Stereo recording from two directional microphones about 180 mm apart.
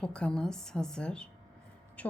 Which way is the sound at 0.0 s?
5° left (ahead or behind).